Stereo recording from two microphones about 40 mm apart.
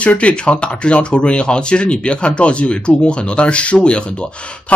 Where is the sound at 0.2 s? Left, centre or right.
Left.